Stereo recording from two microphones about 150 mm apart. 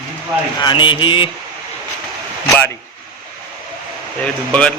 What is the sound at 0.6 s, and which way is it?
Speech, 35° left (ahead or behind).